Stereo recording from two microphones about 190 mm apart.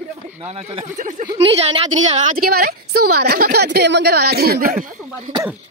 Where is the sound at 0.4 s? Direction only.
35° right (ahead or behind).